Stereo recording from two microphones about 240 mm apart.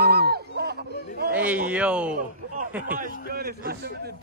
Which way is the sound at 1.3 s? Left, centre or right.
Centre.